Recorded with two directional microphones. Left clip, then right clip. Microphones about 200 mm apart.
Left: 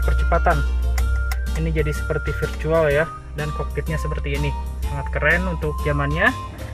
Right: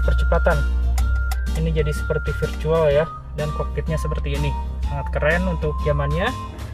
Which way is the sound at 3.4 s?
Centre (ahead or behind).